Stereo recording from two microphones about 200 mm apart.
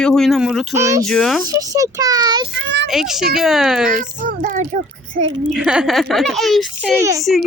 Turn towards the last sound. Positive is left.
turn(degrees=-15)  # may be behind; listen again after turning